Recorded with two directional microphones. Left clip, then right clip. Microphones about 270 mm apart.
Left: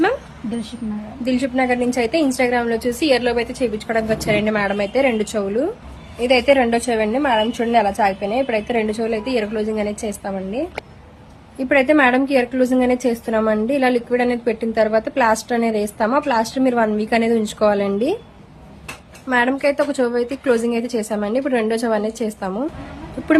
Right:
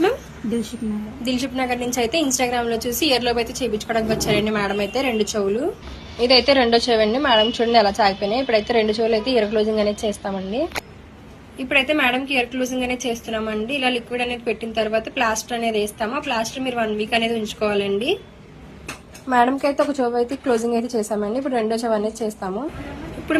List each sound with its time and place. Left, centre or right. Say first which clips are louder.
1.2 s a woman's voice: left 5 dB; centre
11.7 s a woman's voice: left 4 dB; centre
19.3 s a woman's voice: left 1 dB; centre